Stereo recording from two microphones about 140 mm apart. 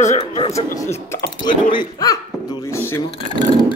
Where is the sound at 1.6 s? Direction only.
30° left (ahead or behind).